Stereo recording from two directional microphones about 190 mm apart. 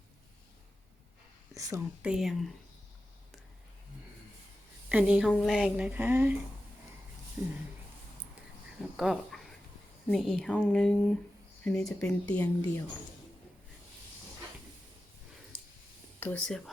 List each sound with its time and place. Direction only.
1.5 s speech: 20° right (ahead or behind)
2.0 s speech: 5° right (ahead or behind)
4.9 s speech: 5° right (ahead or behind)
7.4 s speech: 10° right (ahead or behind)
9.0 s a sound: centre (ahead or behind)
10.1 s speech: centre (ahead or behind)
16.2 s speech: 5° left (ahead or behind)